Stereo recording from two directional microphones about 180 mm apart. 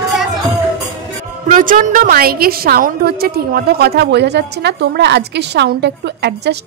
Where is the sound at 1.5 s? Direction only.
50° right (ahead or behind); by 6.6 s 70° right (ahead or behind).